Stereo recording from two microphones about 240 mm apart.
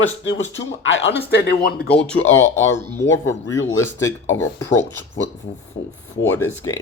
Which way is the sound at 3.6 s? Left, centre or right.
Left.